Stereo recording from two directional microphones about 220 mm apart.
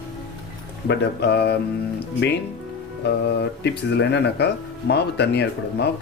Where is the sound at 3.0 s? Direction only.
50° left (ahead or behind).